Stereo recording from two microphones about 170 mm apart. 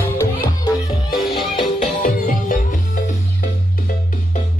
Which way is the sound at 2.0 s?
55° left (ahead or behind).